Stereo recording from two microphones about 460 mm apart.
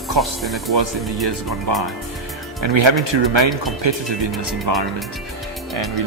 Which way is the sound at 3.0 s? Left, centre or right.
Right.